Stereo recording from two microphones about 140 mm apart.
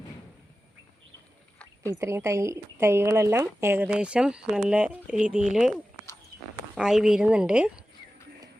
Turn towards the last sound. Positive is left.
turn(degrees=-5)  # may be behind; listen again after turning